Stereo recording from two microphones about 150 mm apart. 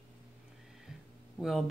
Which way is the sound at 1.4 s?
Centre (ahead or behind).